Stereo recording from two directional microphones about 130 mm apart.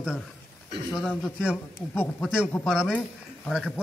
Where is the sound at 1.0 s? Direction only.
Centre (ahead or behind).